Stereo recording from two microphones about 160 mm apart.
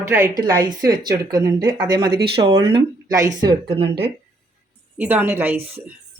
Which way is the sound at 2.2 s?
90° right.